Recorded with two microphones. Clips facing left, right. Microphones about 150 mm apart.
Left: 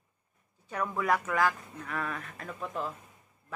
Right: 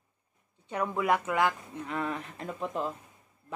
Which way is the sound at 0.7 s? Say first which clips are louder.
Right 2 dB; 20° right (ahead or behind).